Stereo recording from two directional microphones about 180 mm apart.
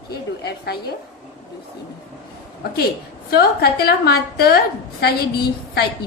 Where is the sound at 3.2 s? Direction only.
60° left (ahead or behind).